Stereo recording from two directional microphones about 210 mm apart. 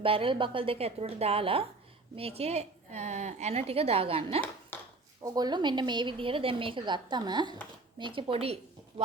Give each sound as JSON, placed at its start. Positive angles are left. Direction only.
{"t": 0.0, "sound": "a woman's voice", "side_deg": -25}
{"t": 4.7, "sound": "a sound", "side_deg": 10}
{"t": 5.2, "sound": "a woman's voice", "side_deg": -20}